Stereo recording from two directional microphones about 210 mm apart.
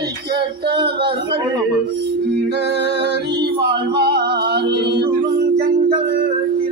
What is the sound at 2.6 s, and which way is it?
Music, 55° right (ahead or behind).